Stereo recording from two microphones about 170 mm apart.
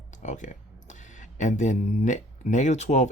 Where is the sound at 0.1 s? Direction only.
45° left (ahead or behind).